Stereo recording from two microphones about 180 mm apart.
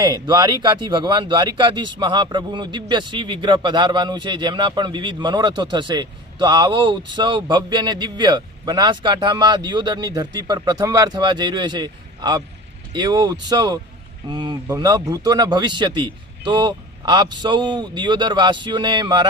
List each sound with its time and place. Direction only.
0.0 s a man's voice: 25° right (ahead or behind)